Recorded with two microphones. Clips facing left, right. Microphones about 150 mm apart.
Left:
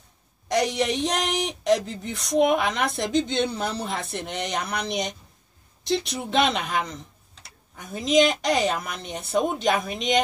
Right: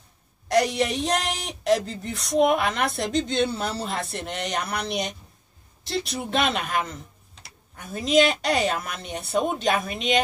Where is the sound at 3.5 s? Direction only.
15° left (ahead or behind).